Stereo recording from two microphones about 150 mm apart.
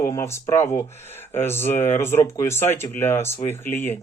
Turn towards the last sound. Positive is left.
turn(degrees=15)  # may be behind; listen again after turning